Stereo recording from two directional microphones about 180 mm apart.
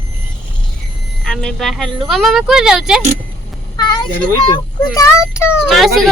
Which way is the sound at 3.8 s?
20° left (ahead or behind).